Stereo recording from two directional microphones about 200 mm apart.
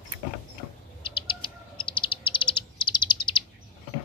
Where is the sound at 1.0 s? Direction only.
25° left (ahead or behind).